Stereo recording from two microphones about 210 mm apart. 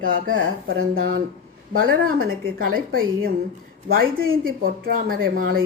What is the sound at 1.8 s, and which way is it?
A woman's voice, 45° right (ahead or behind).